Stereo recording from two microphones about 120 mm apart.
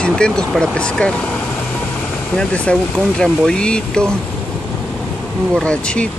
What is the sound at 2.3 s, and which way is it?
Speech, 10° left (ahead or behind).